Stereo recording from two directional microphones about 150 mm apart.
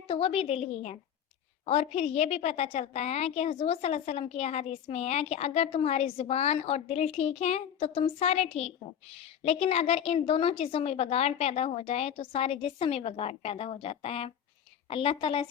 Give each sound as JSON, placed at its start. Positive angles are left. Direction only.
{"t": 0.1, "sound": "a woman's voice", "side_deg": 40}